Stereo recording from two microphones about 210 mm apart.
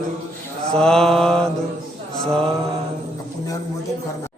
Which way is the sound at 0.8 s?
5° left (ahead or behind).